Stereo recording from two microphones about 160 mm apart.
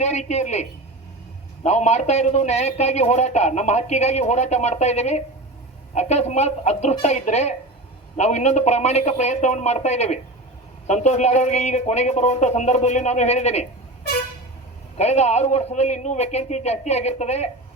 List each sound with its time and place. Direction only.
0.0 s a man's voice: 45° left (ahead or behind)
14.9 s a man's voice: 45° left (ahead or behind)